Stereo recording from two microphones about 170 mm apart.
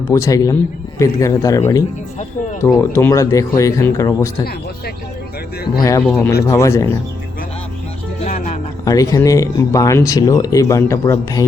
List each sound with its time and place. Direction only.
0.1 s speech: 20° left (ahead or behind)
6.0 s speech: 10° left (ahead or behind)
8.8 s speech: 20° left (ahead or behind)